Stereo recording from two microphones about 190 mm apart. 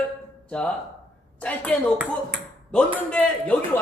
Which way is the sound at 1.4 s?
5° left (ahead or behind).